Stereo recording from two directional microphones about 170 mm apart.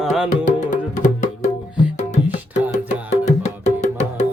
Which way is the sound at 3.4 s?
40° left (ahead or behind).